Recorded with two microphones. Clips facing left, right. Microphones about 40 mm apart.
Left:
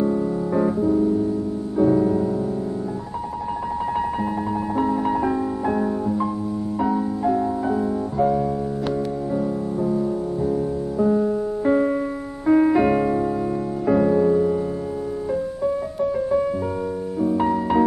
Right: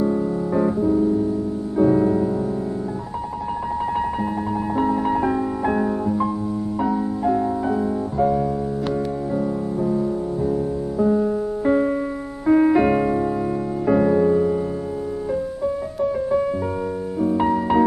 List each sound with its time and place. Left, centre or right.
0.0 s music: centre
4.7 s music: centre
9.8 s music: centre
15.6 s music: centre